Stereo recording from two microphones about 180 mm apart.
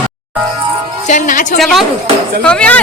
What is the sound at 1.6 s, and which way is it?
Speech, centre (ahead or behind).